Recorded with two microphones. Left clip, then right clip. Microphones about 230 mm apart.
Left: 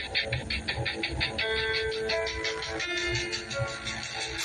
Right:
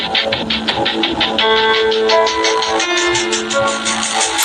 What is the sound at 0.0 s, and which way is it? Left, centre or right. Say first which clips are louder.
Music: right 15 dB; right.